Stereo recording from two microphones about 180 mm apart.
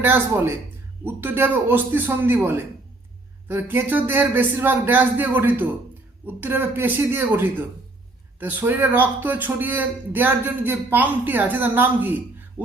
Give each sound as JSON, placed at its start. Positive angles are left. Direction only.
{"t": 0.0, "sound": "speech", "side_deg": -10}